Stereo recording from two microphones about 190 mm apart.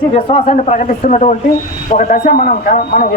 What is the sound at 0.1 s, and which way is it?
Speech, 30° left (ahead or behind).